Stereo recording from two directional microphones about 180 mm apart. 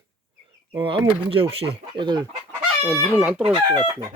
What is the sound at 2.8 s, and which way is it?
Chicken, 5° right (ahead or behind).